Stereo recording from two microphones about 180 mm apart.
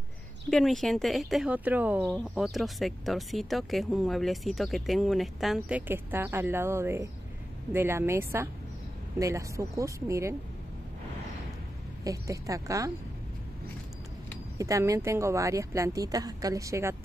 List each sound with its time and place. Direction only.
0.5 s speech: centre (ahead or behind); by 10.3 s 15° right (ahead or behind)
12.0 s speech: 20° right (ahead or behind)
14.6 s speech: 20° right (ahead or behind)